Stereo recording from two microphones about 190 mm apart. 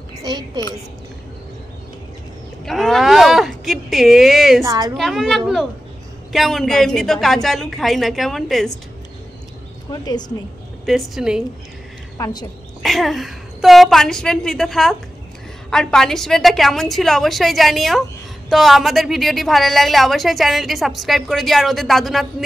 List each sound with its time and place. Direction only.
0.2 s a woman's voice: 20° right (ahead or behind)
2.6 s speech: centre (ahead or behind)
4.6 s a woman's voice: 20° right (ahead or behind)
4.9 s a woman's voice: centre (ahead or behind)
9.8 s a woman's voice: 20° left (ahead or behind)
10.9 s a woman's voice: centre (ahead or behind)
12.2 s a woman's voice: 20° left (ahead or behind)
12.8 s a woman's voice: centre (ahead or behind)